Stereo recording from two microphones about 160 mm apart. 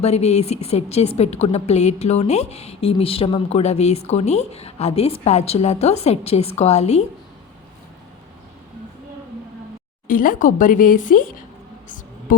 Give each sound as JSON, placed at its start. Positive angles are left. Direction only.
{"t": 0.0, "sound": "a woman's voice", "side_deg": 40}
{"t": 10.1, "sound": "a woman's voice", "side_deg": 60}